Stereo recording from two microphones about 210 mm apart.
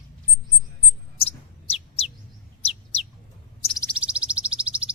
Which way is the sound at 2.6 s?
30° left (ahead or behind).